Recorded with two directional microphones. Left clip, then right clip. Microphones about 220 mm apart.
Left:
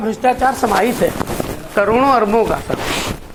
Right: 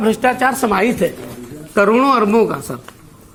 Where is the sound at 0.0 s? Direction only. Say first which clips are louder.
Even; 35° right (ahead or behind).